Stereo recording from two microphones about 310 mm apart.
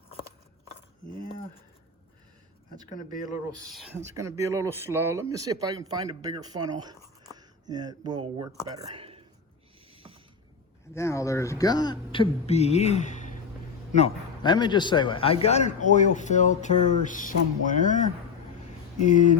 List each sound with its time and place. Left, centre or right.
3.8 s speech: centre
9.9 s a sound: centre
10.9 s a man's voice: centre